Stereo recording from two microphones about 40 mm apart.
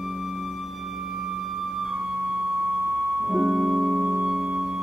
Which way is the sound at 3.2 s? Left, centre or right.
Centre.